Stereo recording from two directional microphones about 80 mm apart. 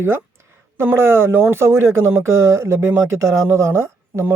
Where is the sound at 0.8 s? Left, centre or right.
Right.